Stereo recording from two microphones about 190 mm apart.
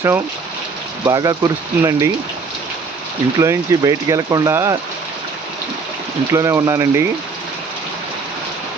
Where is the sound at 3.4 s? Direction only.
15° right (ahead or behind).